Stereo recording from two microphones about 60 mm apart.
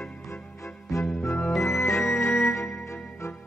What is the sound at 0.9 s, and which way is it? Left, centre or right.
Music, left.